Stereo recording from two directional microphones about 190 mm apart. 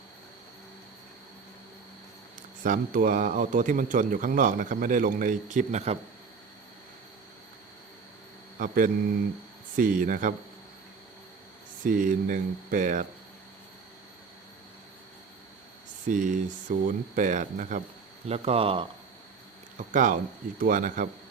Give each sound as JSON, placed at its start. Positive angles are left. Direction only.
{"t": 2.6, "sound": "speech", "side_deg": -45}
{"t": 8.5, "sound": "speech", "side_deg": -45}
{"t": 11.8, "sound": "speech", "side_deg": -45}
{"t": 16.0, "sound": "speech", "side_deg": -45}
{"t": 19.9, "sound": "speech", "side_deg": -45}